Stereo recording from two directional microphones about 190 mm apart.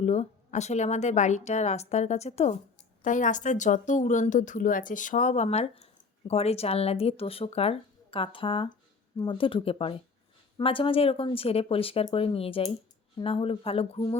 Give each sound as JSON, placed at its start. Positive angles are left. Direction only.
{"t": 0.0, "sound": "speech", "side_deg": 35}